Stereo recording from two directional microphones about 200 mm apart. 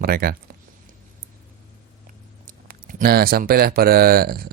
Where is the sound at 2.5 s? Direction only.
50° right (ahead or behind).